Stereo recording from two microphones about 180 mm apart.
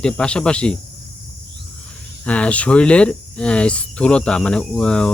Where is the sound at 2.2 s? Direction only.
5° left (ahead or behind).